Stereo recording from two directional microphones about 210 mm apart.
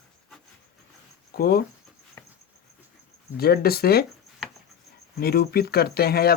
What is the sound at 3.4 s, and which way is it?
Speech, 45° left (ahead or behind).